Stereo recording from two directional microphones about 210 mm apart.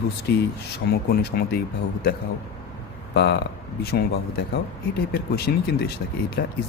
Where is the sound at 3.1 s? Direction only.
50° left (ahead or behind).